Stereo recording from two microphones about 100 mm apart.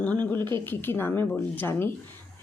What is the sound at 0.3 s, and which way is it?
Speech, 50° right (ahead or behind).